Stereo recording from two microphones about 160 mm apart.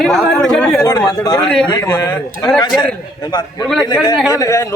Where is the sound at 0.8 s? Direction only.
20° left (ahead or behind).